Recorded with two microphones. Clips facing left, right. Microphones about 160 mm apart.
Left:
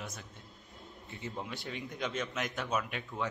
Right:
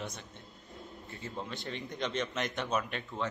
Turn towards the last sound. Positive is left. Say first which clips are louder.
# right 1 dB
turn(degrees=10)  # may be behind; listen again after turning